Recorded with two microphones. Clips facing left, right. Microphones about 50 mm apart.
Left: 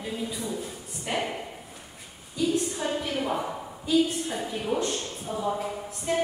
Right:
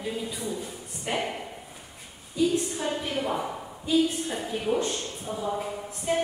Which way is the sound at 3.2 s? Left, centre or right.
Centre.